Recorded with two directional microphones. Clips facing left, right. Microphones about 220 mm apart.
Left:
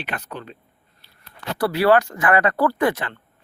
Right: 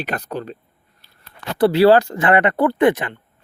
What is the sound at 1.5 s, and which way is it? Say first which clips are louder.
Speech: right 5 dB; 25° right (ahead or behind).